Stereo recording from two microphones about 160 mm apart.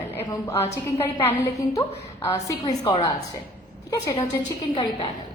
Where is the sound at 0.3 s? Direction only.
20° left (ahead or behind).